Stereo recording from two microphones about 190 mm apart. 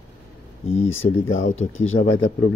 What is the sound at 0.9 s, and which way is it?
Speech, 90° left.